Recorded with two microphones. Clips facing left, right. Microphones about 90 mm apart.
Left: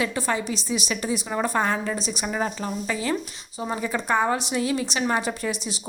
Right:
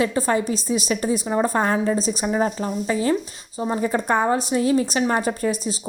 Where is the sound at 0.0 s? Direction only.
35° right (ahead or behind).